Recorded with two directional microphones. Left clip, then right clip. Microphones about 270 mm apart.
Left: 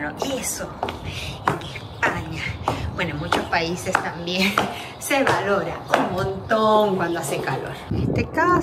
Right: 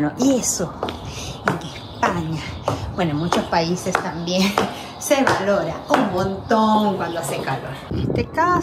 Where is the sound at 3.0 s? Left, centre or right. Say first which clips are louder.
Right 3 dB; centre.